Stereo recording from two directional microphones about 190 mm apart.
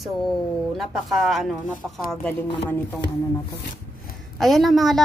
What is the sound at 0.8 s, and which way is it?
A woman's voice, centre (ahead or behind).